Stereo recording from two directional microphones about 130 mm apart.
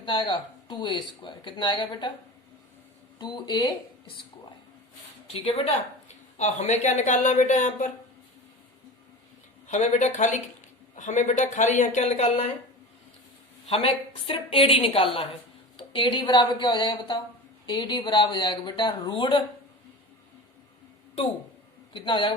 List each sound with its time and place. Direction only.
0.0 s speech: 40° left (ahead or behind)
3.2 s speech: 35° left (ahead or behind)
5.3 s a woman's voice: 50° left (ahead or behind)
6.3 s speech: 60° left (ahead or behind)
9.6 s speech: 65° left (ahead or behind)
13.7 s a woman's voice: 45° left (ahead or behind)
21.9 s speech: 40° left (ahead or behind)